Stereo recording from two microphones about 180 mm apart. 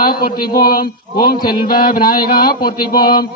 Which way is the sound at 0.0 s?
55° left (ahead or behind).